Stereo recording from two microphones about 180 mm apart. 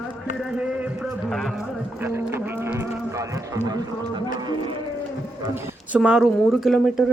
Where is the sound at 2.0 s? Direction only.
15° right (ahead or behind).